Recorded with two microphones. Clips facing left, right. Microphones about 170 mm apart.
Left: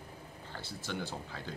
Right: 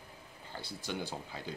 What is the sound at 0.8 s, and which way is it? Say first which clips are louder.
Speech: even; 15° right (ahead or behind).